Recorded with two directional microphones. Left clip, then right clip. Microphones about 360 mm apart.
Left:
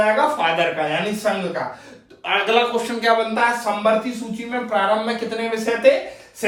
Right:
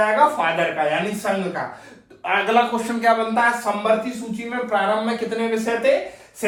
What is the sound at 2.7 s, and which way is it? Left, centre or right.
A man's voice, centre.